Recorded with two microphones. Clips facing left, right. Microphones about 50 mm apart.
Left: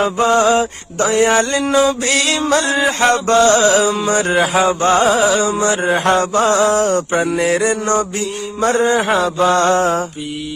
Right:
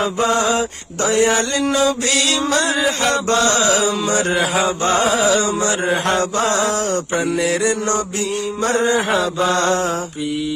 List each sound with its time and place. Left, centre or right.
0.0 s mantra: left